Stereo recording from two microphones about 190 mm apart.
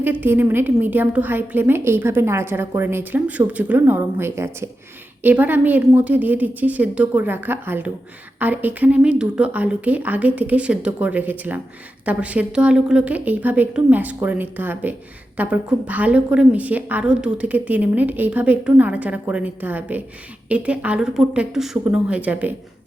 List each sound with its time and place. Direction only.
0.0 s a woman's voice: 10° right (ahead or behind)